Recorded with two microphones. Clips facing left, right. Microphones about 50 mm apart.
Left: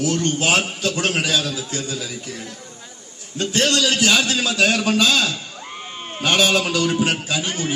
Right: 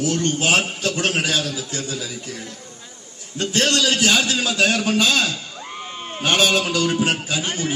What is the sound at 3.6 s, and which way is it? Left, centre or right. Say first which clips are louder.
Speech: even; right.